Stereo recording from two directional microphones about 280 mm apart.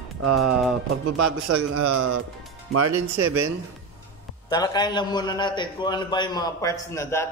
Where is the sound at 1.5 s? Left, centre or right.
Right.